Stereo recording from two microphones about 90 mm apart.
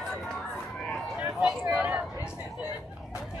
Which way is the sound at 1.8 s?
10° right (ahead or behind).